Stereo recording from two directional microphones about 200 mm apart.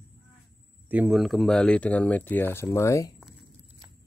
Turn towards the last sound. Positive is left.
turn(degrees=15)  # may be behind; listen again after turning